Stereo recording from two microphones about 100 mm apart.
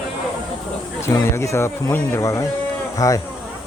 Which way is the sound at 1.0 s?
30° left (ahead or behind).